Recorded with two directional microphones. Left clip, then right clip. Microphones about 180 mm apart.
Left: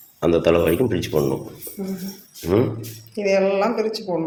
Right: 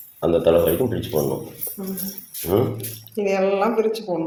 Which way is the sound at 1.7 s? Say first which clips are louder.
Left 2 dB; 40° left (ahead or behind).